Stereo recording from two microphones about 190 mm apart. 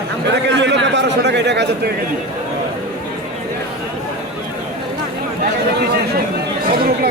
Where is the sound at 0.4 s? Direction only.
70° right (ahead or behind).